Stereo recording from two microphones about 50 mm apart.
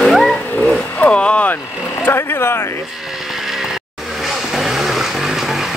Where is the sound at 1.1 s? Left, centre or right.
Left.